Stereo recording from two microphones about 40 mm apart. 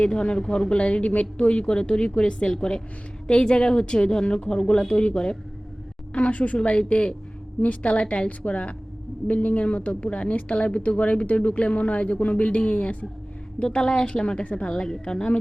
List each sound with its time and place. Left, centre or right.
0.0 s speech: left
0.7 s speech: left
6.1 s a woman's voice: left
13.6 s speech: centre